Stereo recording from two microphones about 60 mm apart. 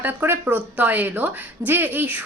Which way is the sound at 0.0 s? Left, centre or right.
Right.